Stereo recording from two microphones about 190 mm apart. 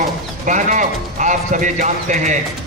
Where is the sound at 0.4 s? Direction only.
40° right (ahead or behind).